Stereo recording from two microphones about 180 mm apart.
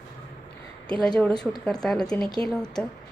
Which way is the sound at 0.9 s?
5° left (ahead or behind).